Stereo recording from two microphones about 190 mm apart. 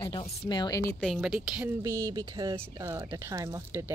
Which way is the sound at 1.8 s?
15° right (ahead or behind).